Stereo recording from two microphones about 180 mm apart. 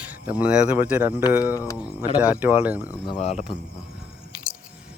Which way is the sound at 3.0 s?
35° left (ahead or behind).